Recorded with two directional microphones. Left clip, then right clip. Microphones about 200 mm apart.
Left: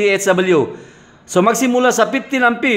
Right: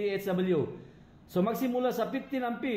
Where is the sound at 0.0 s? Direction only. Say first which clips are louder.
Left 17 dB; 40° left (ahead or behind).